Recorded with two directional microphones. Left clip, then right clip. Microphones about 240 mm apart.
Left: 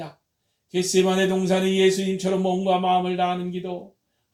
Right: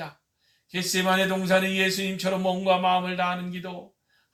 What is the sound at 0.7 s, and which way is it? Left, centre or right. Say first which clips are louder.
A man's voice: left 3 dB; centre.